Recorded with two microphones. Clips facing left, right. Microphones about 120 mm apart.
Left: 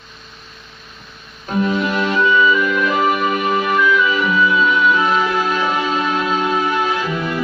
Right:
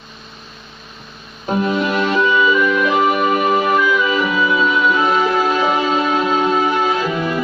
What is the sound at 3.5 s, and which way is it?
Music, 20° right (ahead or behind).